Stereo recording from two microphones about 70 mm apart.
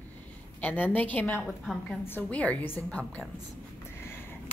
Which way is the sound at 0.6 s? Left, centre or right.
Left.